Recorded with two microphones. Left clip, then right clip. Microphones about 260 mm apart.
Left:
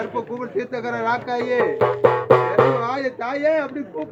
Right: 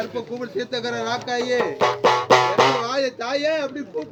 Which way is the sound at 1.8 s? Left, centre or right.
Right.